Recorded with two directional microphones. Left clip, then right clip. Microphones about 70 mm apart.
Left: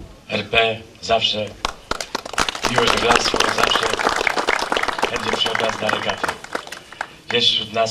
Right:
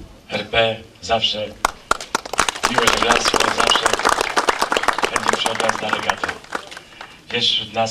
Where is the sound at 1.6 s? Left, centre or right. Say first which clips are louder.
Right 5 dB; right.